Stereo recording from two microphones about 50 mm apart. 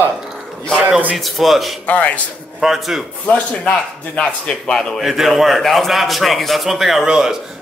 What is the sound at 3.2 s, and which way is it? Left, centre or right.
Speech, left.